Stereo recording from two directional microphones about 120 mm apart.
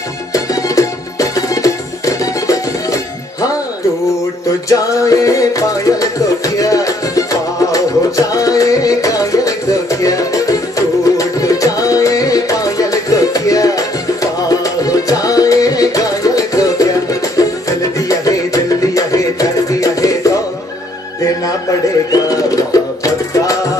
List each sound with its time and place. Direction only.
0.3 s music: 30° left (ahead or behind)
4.6 s music: 30° left (ahead or behind)
22.1 s music: 30° left (ahead or behind)